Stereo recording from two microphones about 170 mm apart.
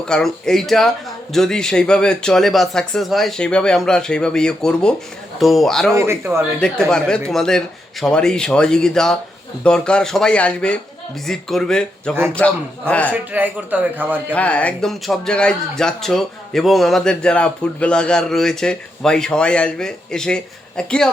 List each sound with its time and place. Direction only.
0.0 s a man's voice: 5° left (ahead or behind)
5.9 s a man's voice: 15° right (ahead or behind)
6.6 s a man's voice: 5° left (ahead or behind)
13.3 s a man's voice: 10° right (ahead or behind)
14.3 s a man's voice: 10° left (ahead or behind)